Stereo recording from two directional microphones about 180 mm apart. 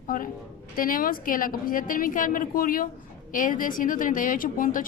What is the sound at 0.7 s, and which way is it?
A woman's voice, 50° left (ahead or behind).